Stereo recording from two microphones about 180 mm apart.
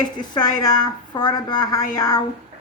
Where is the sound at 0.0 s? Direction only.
25° left (ahead or behind).